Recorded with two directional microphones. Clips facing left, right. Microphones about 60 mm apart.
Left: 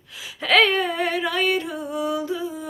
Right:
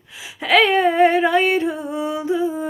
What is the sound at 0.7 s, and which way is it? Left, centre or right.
Music, right.